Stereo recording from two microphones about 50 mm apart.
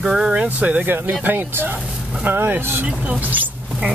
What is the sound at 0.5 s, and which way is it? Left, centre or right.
Speech, right.